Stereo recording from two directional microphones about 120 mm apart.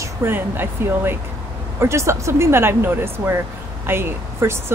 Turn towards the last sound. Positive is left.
turn(degrees=-20)  # may be behind; listen again after turning